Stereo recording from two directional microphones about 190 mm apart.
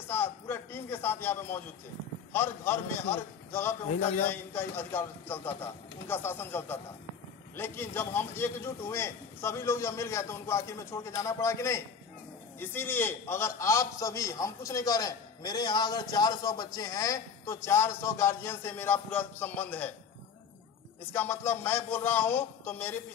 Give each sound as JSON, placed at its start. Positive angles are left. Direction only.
{"t": 0.1, "sound": "a sound", "side_deg": 10}
{"t": 2.3, "sound": "a man's voice", "side_deg": 10}
{"t": 21.1, "sound": "a man's voice", "side_deg": 10}